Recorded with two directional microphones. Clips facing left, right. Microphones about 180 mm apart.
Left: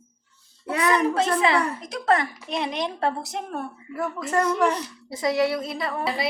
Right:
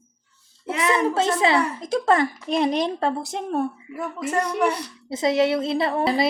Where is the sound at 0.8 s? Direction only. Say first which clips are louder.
Right 1 dB; 25° right (ahead or behind).